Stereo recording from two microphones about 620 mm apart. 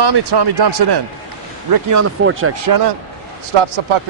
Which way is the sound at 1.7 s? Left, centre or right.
Right.